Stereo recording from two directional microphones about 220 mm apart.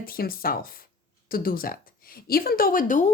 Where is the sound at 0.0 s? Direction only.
40° left (ahead or behind).